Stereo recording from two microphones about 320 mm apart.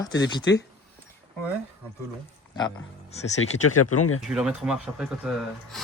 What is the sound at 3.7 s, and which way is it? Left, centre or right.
Speech, left.